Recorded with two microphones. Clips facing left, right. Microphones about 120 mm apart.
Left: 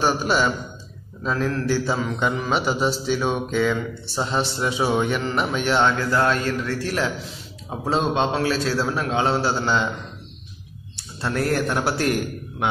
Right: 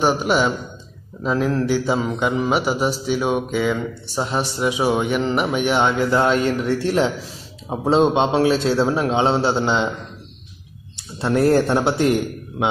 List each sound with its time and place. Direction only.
0.0 s a man's voice: 15° right (ahead or behind)
11.1 s a man's voice: 25° right (ahead or behind)